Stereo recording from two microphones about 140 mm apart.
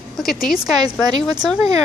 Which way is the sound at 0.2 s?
Centre (ahead or behind).